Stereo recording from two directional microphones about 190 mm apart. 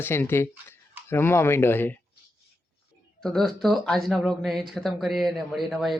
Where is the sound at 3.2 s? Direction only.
Centre (ahead or behind).